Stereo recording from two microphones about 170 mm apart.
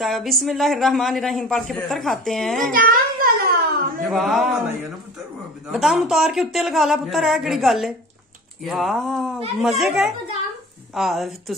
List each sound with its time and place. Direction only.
0.0 s a man's voice: centre (ahead or behind)
2.7 s a sound: 55° right (ahead or behind)
4.1 s a man's voice: centre (ahead or behind)
5.7 s a man's voice: centre (ahead or behind)